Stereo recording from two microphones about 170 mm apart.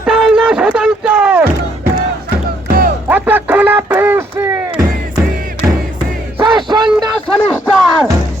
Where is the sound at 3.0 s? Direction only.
10° right (ahead or behind).